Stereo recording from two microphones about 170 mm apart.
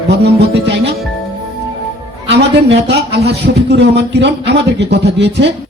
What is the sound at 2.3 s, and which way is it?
A man's voice, 85° right.